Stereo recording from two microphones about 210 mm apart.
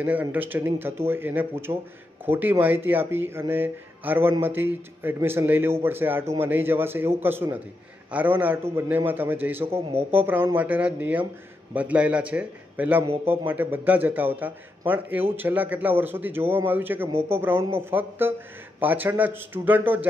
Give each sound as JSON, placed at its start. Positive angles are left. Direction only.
{"t": 0.0, "sound": "speech", "side_deg": -10}